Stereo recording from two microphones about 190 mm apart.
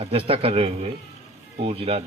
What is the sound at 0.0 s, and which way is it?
A man's voice, 30° right (ahead or behind).